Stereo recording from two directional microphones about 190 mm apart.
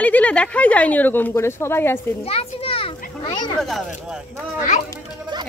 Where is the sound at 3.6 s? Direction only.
Centre (ahead or behind).